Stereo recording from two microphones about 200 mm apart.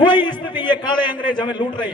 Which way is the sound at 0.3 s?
25° left (ahead or behind).